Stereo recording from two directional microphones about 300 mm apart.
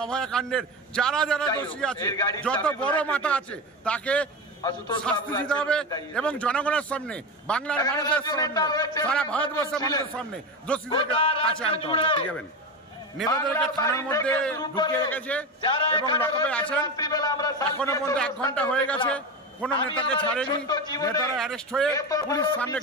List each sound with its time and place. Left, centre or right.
0.0 s a man's voice: centre
4.6 s a man's voice: centre
13.3 s a man's voice: centre
21.4 s a man's voice: centre